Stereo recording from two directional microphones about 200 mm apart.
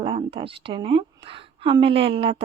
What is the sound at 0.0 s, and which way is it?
A woman's voice, 25° right (ahead or behind).